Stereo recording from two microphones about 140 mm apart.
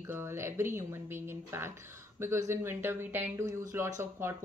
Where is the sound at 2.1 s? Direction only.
20° right (ahead or behind).